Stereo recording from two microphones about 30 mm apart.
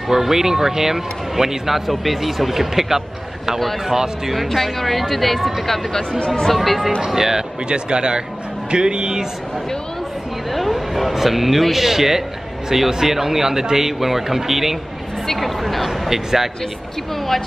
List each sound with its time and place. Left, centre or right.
0.1 s a man's voice: centre
4.7 s speech: centre
6.1 s speech: left
6.5 s speech: centre
7.2 s a man's voice: centre
7.6 s speech: right
10.5 s a sound: centre
11.1 s a man's voice: centre
15.2 s speech: centre
16.1 s a man's voice: centre